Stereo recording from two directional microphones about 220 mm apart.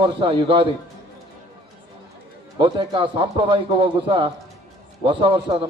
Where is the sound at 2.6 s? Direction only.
20° right (ahead or behind).